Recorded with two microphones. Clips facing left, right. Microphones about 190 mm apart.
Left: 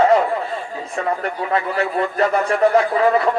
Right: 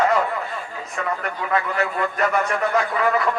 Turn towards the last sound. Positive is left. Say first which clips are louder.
# left 5 dB
turn(degrees=30)  # may be behind; listen again after turning